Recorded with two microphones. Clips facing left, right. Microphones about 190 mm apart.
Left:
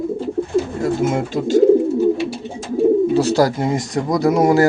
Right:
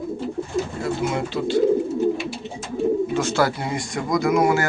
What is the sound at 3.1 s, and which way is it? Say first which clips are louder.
Speech: left 6 dB; 35° left (ahead or behind).